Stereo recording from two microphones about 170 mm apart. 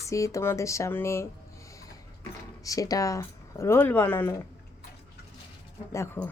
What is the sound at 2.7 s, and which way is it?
Speech, 20° left (ahead or behind).